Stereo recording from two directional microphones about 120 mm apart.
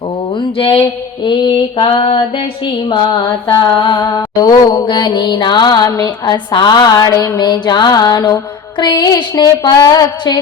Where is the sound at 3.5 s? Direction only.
35° left (ahead or behind).